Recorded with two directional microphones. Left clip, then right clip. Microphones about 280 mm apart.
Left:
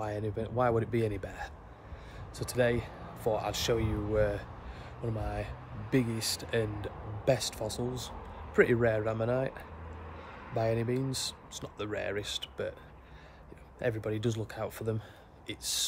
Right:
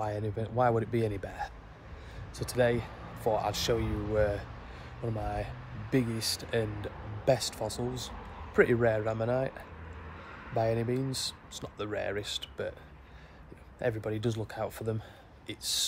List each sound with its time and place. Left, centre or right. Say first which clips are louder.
0.0 s speech: right 1 dB; centre
10.2 s a sound: right 1 dB; left
10.5 s speech: right 1 dB; centre
13.7 s speech: right 1 dB; centre